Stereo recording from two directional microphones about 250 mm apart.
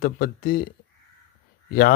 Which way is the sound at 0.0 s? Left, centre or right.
Left.